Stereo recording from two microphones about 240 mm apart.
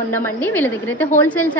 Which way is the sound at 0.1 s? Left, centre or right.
Centre.